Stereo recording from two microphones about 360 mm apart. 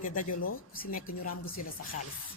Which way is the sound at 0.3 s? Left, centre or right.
Left.